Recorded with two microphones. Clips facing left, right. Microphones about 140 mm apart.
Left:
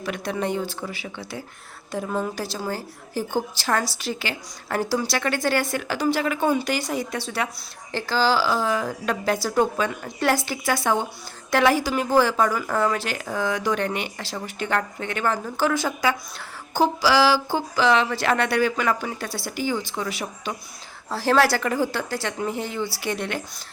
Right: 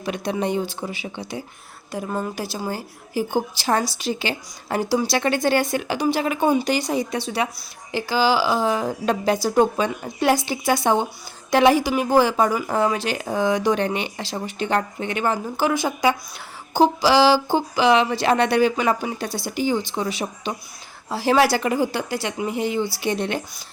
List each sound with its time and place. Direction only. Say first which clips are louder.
0.0 s a woman's voice: right 2 dB; 20° right (ahead or behind)
1.9 s a woman's voice: even; 5° right (ahead or behind); by 23.4 s 20° right (ahead or behind)